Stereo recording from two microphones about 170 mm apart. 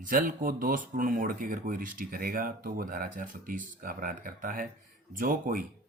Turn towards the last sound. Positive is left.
turn(degrees=-55)  # may be behind; listen again after turning